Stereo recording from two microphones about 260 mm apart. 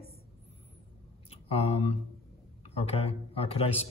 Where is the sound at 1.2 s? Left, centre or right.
Left.